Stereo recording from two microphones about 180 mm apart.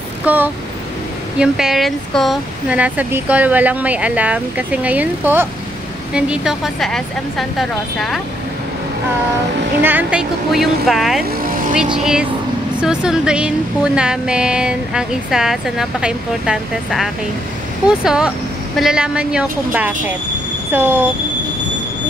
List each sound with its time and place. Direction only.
0.2 s a sound: 10° right (ahead or behind)
1.4 s a woman's voice: centre (ahead or behind)
9.8 s a woman's voice: 10° right (ahead or behind)
11.2 s vehicle: 55° right (ahead or behind)
11.7 s a woman's voice: 5° right (ahead or behind)